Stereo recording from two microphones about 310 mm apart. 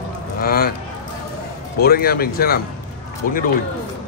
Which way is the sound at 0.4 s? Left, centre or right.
Left.